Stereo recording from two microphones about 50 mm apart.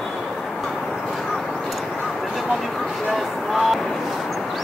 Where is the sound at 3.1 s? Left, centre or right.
Centre.